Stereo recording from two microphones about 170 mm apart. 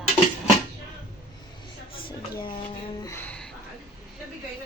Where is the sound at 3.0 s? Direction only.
15° left (ahead or behind).